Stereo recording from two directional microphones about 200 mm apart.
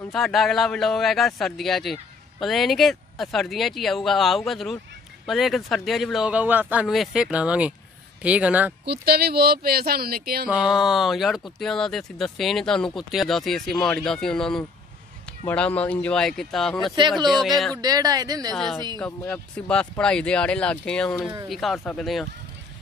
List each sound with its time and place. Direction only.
0.1 s speech: centre (ahead or behind)
8.8 s speech: 50° right (ahead or behind)
10.5 s speech: centre (ahead or behind)
17.8 s speech: 20° right (ahead or behind)
18.5 s speech: centre (ahead or behind)